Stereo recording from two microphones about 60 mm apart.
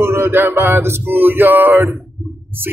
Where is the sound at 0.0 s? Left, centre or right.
Right.